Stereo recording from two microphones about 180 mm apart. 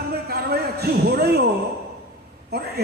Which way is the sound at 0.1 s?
60° right (ahead or behind).